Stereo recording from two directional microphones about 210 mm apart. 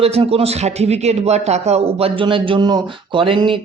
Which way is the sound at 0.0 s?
30° right (ahead or behind).